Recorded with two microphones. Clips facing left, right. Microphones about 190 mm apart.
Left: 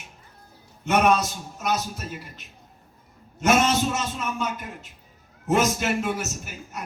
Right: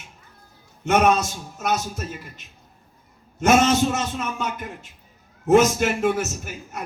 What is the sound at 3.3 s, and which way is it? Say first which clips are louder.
A man's voice: right 3 dB; 50° right (ahead or behind).